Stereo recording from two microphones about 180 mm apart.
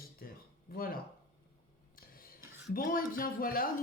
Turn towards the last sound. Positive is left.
turn(degrees=50)  # may be behind; listen again after turning